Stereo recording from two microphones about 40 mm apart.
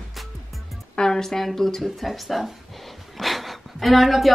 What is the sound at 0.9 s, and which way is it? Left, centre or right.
Speech, centre.